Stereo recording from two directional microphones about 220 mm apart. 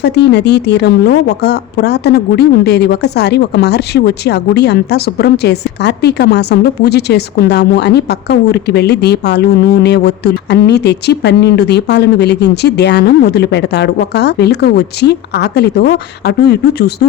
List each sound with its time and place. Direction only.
0.0 s a woman's voice: 50° left (ahead or behind)